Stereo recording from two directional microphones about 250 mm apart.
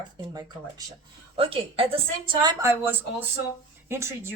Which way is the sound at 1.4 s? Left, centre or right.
Right.